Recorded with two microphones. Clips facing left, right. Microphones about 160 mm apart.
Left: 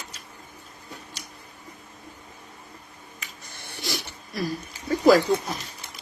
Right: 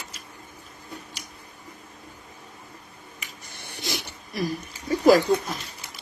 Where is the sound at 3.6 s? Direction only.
20° right (ahead or behind).